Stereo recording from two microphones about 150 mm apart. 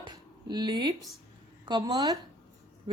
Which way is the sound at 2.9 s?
35° right (ahead or behind).